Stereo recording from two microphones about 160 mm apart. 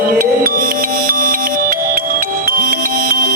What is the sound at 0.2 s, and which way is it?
Music, 60° right (ahead or behind).